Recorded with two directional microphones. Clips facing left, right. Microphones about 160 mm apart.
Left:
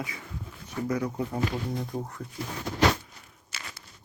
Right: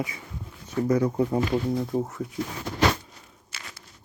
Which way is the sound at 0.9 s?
30° right (ahead or behind).